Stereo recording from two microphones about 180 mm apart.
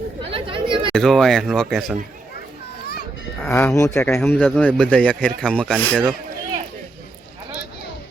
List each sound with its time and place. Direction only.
0.3 s chatter: 30° right (ahead or behind)
0.9 s speech: centre (ahead or behind)
3.4 s speech: 10° left (ahead or behind)